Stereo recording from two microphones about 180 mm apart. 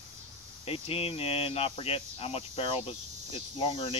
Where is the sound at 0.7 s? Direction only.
30° left (ahead or behind).